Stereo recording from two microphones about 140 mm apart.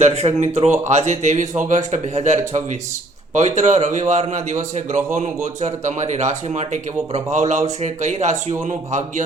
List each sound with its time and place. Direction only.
0.0 s speech: 50° right (ahead or behind)